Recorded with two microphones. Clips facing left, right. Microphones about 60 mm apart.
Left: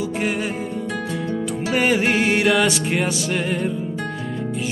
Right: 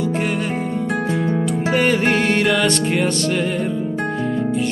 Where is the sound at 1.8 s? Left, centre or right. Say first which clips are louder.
Even; centre.